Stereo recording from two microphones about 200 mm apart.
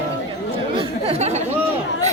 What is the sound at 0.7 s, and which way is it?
Speech, 30° right (ahead or behind).